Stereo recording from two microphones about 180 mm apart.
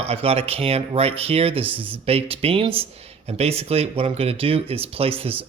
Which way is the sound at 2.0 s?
35° right (ahead or behind).